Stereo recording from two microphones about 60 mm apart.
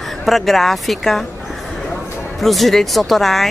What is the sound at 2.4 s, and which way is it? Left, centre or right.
Speech, centre.